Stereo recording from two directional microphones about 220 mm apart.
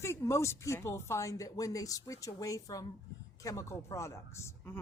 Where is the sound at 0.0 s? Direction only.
10° left (ahead or behind).